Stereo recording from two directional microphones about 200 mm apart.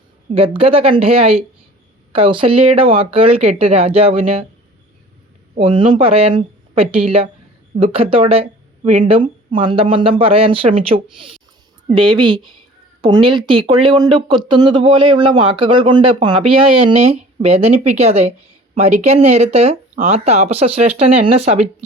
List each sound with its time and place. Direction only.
0.3 s speech: 25° right (ahead or behind)
5.5 s speech: 25° right (ahead or behind)